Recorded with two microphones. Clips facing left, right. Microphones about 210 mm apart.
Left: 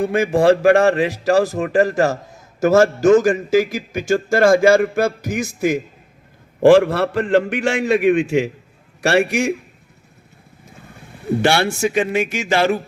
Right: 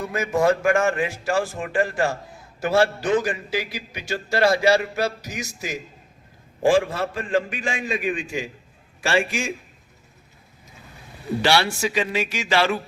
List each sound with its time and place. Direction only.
0.0 s speech: 30° left (ahead or behind); by 5.8 s 55° left (ahead or behind)
6.6 s a man's voice: 65° left (ahead or behind)
11.4 s speech: 50° left (ahead or behind)